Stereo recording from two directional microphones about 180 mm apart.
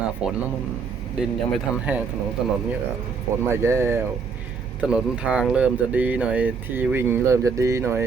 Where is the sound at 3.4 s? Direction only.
15° right (ahead or behind).